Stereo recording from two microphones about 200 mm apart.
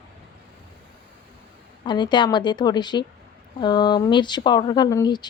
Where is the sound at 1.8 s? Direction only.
20° left (ahead or behind).